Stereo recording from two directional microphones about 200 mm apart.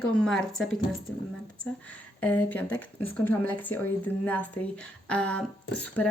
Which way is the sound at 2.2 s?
10° left (ahead or behind).